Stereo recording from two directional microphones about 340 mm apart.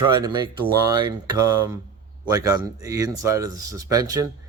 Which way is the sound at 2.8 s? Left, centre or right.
Centre.